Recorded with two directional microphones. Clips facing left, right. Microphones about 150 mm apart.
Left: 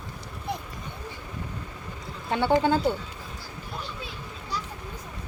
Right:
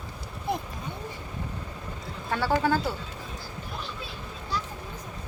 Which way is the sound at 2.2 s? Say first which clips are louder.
Left 3 dB; 20° left (ahead or behind).